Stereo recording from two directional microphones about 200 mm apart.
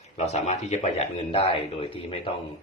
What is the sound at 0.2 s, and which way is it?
A man's voice, 35° left (ahead or behind).